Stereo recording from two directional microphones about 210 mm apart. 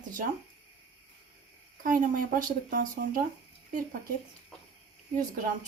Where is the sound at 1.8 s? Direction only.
40° right (ahead or behind).